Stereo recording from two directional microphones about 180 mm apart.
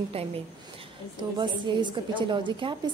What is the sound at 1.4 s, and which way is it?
Speech, 25° right (ahead or behind).